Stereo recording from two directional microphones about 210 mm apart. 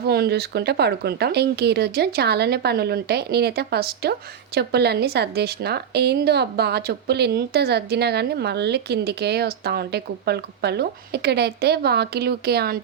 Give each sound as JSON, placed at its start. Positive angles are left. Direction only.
{"t": 0.0, "sound": "a woman's voice", "side_deg": -50}